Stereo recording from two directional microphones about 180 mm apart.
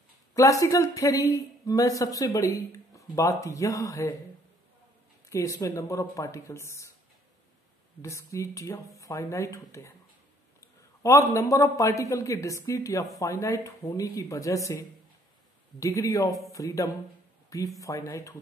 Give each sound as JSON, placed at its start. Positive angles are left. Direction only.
{"t": 0.3, "sound": "a man's voice", "side_deg": 20}
{"t": 5.3, "sound": "a man's voice", "side_deg": 15}
{"t": 8.0, "sound": "a man's voice", "side_deg": 15}
{"t": 16.3, "sound": "speech", "side_deg": 0}
{"t": 16.5, "sound": "a man's voice", "side_deg": 20}